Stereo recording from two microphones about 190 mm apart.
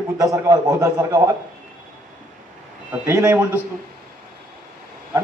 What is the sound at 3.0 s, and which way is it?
Speech, 10° right (ahead or behind).